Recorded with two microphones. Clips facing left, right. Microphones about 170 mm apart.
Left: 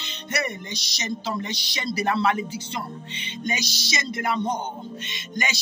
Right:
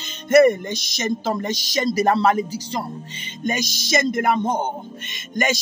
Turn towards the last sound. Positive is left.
turn(degrees=-50)  # may be behind; listen again after turning